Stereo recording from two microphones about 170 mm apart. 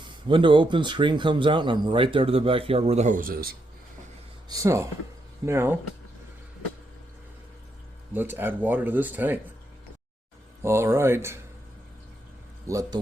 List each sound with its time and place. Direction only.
0.3 s speech: 30° right (ahead or behind); by 3.5 s 60° right (ahead or behind)
4.4 s speech: 20° right (ahead or behind)
8.1 s speech: 10° right (ahead or behind)
10.6 s speech: 15° right (ahead or behind)
12.6 s speech: 20° right (ahead or behind)